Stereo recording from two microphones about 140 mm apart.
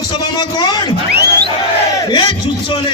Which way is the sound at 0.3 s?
30° left (ahead or behind).